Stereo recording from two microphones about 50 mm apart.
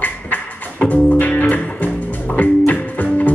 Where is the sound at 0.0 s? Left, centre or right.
Left.